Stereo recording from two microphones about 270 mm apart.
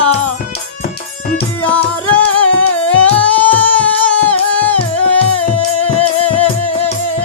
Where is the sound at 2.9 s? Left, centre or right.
Centre.